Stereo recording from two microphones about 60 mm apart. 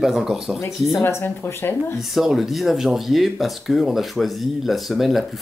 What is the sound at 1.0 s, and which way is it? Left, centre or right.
Speech, left.